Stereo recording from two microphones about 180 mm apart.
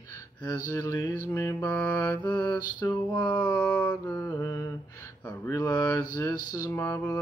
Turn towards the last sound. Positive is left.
turn(degrees=10)  # may be behind; listen again after turning